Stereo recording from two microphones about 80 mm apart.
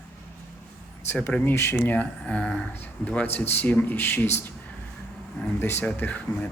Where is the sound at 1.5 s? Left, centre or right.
Left.